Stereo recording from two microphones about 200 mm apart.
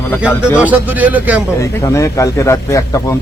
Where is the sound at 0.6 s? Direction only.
10° right (ahead or behind).